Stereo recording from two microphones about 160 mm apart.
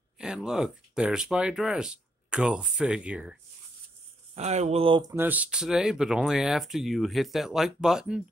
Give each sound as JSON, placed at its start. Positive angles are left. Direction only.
{"t": 0.2, "sound": "speech", "side_deg": -5}
{"t": 4.4, "sound": "speech", "side_deg": -45}
{"t": 5.1, "sound": "speech", "side_deg": -10}